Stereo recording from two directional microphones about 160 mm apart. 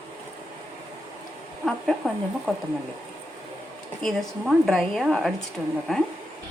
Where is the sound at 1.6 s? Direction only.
Centre (ahead or behind).